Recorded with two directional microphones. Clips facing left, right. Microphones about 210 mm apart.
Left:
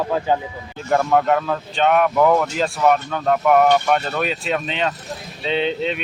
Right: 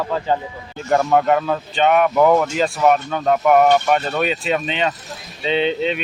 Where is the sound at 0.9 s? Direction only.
Centre (ahead or behind).